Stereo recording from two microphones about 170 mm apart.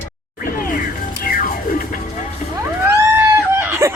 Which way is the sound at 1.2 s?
60° left (ahead or behind).